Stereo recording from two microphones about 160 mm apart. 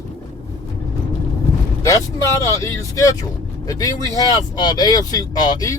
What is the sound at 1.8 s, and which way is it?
Speech, 20° left (ahead or behind).